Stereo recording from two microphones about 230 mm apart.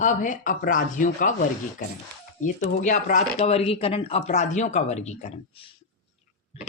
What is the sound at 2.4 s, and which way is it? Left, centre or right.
Speech, left.